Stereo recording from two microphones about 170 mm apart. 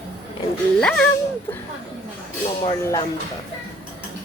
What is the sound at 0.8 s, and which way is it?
Speech, 5° left (ahead or behind).